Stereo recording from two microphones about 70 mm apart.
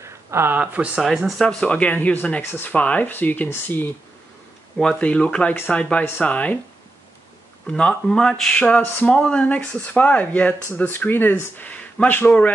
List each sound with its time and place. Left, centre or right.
0.0 s a sound: right
0.6 s speech: right
1.0 s speech: centre
1.4 s speech: centre; by 3.9 s left
4.9 s speech: centre
7.7 s speech: centre
8.6 s speech: left